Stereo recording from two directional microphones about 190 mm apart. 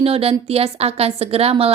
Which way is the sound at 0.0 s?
30° right (ahead or behind).